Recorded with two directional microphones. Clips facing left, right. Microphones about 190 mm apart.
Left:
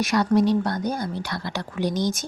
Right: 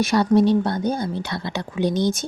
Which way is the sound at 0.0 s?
30° right (ahead or behind).